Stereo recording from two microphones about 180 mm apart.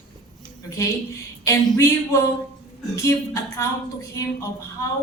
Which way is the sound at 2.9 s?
15° left (ahead or behind).